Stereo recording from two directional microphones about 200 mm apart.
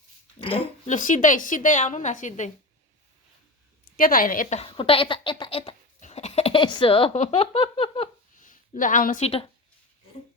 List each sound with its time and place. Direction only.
0.3 s a sound: 30° left (ahead or behind)
0.9 s a woman's voice: 40° left (ahead or behind)
3.9 s a woman's voice: 45° left (ahead or behind); by 8.1 s 30° left (ahead or behind)
8.4 s speech: 40° left (ahead or behind)